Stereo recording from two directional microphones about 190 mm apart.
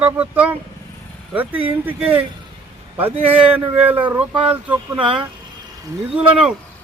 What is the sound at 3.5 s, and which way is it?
Speech, 10° right (ahead or behind).